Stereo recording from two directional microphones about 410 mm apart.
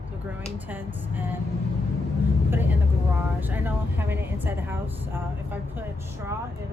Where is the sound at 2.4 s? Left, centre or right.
Centre.